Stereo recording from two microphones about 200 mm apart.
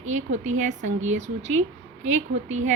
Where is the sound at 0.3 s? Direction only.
35° right (ahead or behind).